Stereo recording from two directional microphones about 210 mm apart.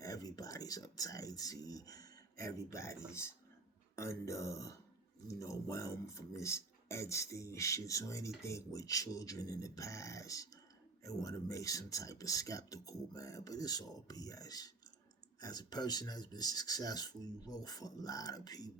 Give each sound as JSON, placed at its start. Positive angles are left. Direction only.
{"t": 0.0, "sound": "speech", "side_deg": 15}